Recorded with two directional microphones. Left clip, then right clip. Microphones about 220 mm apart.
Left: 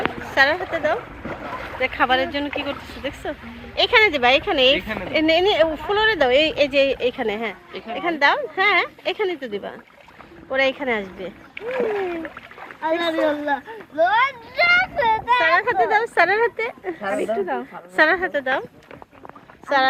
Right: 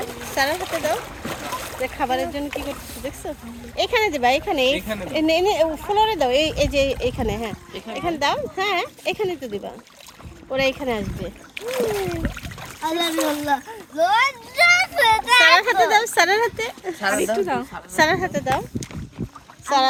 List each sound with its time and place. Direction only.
0.3 s speech: 10° right (ahead or behind)
7.7 s speech: 45° right (ahead or behind)
7.9 s speech: 10° right (ahead or behind)
11.7 s a child's voice: 55° right (ahead or behind)
13.2 s a sound: 60° right (ahead or behind)
15.4 s speech: 20° right (ahead or behind)
17.3 s speech: 55° right (ahead or behind)
17.9 s speech: 10° right (ahead or behind)